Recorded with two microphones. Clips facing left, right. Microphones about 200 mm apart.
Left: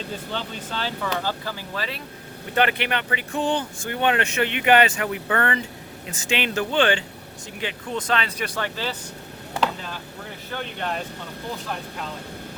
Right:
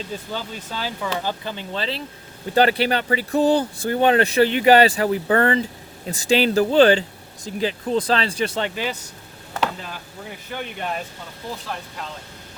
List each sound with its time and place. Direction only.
0.3 s speech: 5° right (ahead or behind)
9.6 s chopping: 5° right (ahead or behind)
10.5 s speech: 10° right (ahead or behind)